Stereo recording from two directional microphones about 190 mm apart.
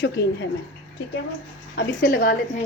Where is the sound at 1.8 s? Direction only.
50° left (ahead or behind).